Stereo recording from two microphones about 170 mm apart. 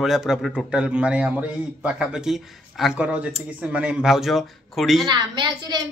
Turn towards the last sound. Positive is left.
turn(degrees=-25)  # may be behind; listen again after turning